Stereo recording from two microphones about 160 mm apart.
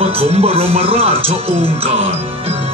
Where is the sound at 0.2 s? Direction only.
40° right (ahead or behind).